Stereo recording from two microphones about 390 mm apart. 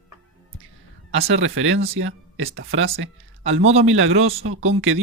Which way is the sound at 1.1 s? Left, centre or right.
Right.